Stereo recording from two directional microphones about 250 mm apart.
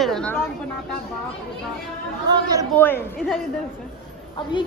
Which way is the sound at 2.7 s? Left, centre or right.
Centre.